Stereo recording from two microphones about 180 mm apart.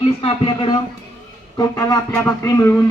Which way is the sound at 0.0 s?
30° left (ahead or behind).